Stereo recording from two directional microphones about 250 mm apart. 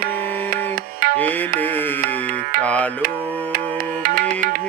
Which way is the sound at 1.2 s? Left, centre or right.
Centre.